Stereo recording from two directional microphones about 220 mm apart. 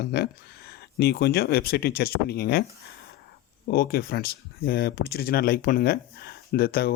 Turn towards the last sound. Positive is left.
turn(degrees=45)  # may be behind; listen again after turning